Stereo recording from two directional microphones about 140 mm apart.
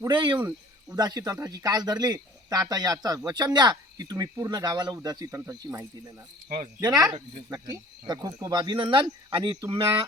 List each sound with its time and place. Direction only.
0.1 s a man's voice: 35° right (ahead or behind)